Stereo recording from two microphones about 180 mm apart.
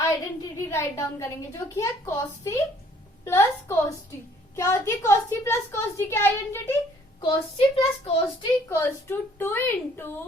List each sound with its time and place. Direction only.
0.1 s a sound: 15° left (ahead or behind)
1.7 s a child's voice: 20° left (ahead or behind)
7.2 s a child's voice: 30° left (ahead or behind)
8.7 s a child's voice: 10° left (ahead or behind)